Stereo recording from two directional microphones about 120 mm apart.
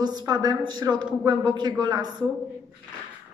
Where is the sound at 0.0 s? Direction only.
35° right (ahead or behind).